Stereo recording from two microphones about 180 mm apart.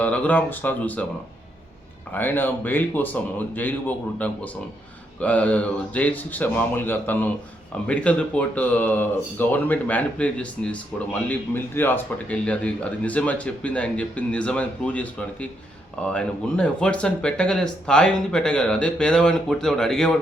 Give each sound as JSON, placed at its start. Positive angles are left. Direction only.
{"t": 0.0, "sound": "speech", "side_deg": 10}
{"t": 2.1, "sound": "speech", "side_deg": 10}